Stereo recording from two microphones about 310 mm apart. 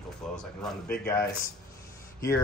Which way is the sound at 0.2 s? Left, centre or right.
Centre.